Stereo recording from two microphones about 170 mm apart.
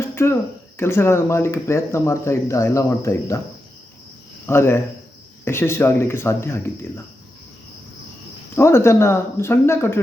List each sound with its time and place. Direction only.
0.0 s a sound: 15° left (ahead or behind)
0.8 s speech: 15° left (ahead or behind)
4.4 s speech: 15° left (ahead or behind)
8.5 s speech: 15° left (ahead or behind)